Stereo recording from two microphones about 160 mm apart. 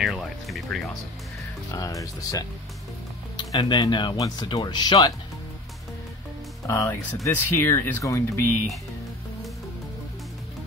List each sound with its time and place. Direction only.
0.0 s speech: centre (ahead or behind)
1.7 s speech: 20° left (ahead or behind)
6.7 s speech: 15° left (ahead or behind)